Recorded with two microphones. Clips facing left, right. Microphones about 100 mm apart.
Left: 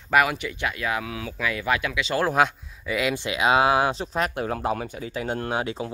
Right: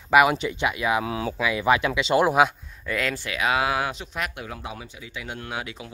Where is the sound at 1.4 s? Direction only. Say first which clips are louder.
Right 3 dB; 15° right (ahead or behind).